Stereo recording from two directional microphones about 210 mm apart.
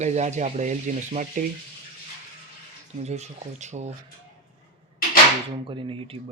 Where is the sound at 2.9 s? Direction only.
30° right (ahead or behind).